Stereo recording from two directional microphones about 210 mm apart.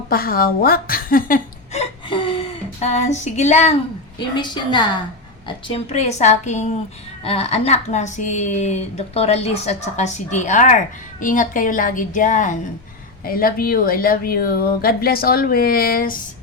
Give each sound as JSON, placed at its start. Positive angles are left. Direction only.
{"t": 0.1, "sound": "a woman's voice", "side_deg": 45}
{"t": 4.4, "sound": "a woman's voice", "side_deg": 20}